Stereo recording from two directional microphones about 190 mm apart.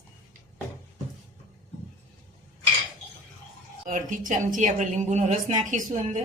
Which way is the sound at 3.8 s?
45° right (ahead or behind).